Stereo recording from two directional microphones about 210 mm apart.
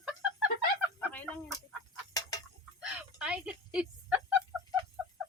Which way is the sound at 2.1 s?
15° left (ahead or behind).